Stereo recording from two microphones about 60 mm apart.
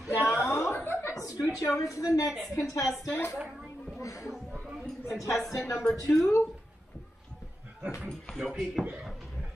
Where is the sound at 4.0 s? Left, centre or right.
Left.